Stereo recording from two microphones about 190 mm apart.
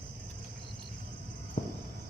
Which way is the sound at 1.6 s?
50° left (ahead or behind).